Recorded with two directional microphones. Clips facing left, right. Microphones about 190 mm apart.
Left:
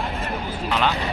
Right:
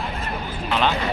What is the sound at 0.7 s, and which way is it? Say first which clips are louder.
Speech: right 1 dB; 15° right (ahead or behind).